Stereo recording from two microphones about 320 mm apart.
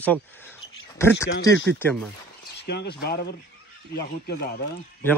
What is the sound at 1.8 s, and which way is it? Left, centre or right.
Speech, centre.